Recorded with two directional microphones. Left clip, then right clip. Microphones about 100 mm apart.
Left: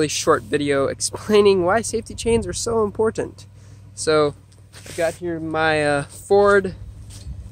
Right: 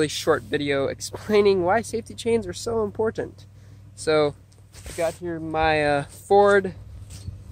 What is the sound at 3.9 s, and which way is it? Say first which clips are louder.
Speech: left 3 dB; 10° left (ahead or behind).